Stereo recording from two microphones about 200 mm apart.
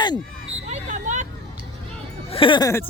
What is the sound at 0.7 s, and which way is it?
Vehicle, 40° right (ahead or behind).